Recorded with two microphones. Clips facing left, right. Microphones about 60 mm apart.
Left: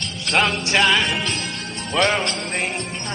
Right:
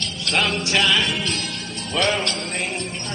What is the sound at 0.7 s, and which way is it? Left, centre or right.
Speech, left.